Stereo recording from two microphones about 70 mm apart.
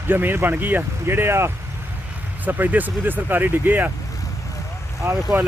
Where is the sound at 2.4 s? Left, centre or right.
Right.